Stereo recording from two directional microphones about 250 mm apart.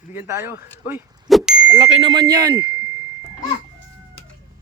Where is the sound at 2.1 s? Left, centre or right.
Centre.